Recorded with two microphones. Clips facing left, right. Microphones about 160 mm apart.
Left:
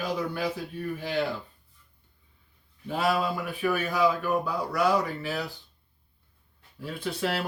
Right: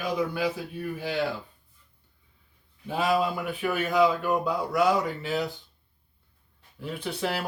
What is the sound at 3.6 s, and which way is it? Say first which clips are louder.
Speech: right 2 dB; 20° right (ahead or behind).